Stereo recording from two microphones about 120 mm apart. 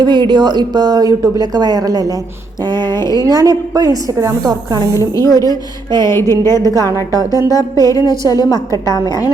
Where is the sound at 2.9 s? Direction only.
25° left (ahead or behind).